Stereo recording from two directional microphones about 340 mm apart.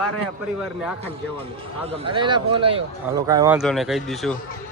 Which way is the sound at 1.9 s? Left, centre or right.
Centre.